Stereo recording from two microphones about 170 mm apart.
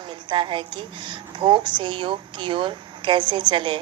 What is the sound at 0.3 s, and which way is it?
A woman's voice, 30° right (ahead or behind).